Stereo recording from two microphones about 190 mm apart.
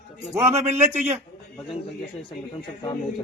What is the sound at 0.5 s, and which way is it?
Speech, 35° right (ahead or behind).